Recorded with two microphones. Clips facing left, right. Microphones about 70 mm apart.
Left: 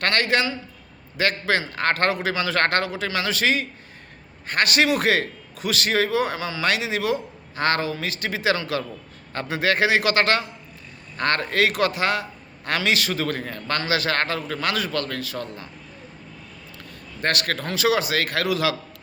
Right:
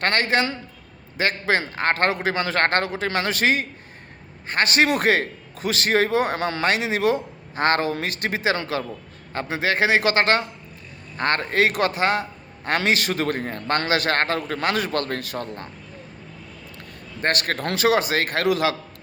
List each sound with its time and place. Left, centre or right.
0.0 s a man's voice: right
4.4 s a man's voice: right
17.2 s a man's voice: right
17.6 s a man's voice: right